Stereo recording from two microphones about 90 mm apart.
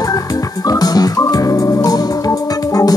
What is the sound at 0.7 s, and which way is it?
Organ, 45° left (ahead or behind).